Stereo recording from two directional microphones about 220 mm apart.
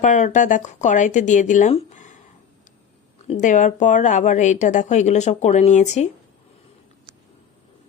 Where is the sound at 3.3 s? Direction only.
35° left (ahead or behind).